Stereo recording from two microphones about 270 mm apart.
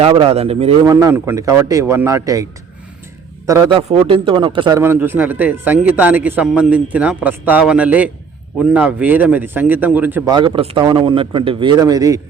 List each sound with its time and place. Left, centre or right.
0.0 s a man's voice: centre
0.9 s a man's voice: centre